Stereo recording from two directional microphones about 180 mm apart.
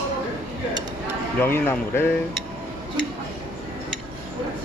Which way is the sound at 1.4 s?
10° left (ahead or behind).